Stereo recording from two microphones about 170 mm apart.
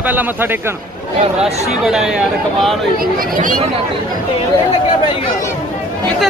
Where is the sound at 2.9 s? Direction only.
55° right (ahead or behind).